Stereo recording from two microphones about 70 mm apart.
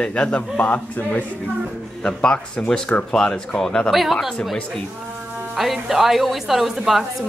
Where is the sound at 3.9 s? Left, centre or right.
Centre.